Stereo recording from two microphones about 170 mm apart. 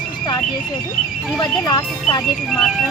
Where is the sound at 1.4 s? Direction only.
25° left (ahead or behind).